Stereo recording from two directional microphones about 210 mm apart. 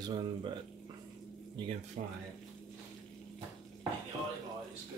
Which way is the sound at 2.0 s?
40° right (ahead or behind).